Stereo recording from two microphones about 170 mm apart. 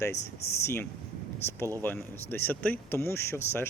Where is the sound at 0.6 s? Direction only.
15° left (ahead or behind).